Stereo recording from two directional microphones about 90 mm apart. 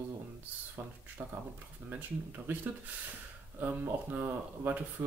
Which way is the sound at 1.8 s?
20° right (ahead or behind).